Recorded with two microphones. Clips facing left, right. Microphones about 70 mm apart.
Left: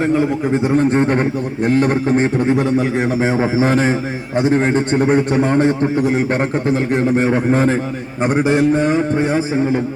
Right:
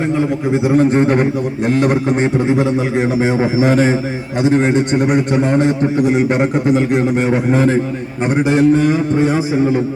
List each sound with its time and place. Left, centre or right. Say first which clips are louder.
0.5 s a man's voice: right 3 dB; centre
2.1 s a man's voice: right 1 dB; centre
4.9 s a man's voice: even; centre
7.5 s a man's voice: right 3 dB; left
8.4 s a sound: right 4 dB; left